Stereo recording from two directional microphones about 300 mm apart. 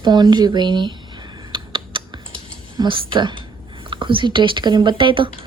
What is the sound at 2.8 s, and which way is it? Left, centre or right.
Speech, centre.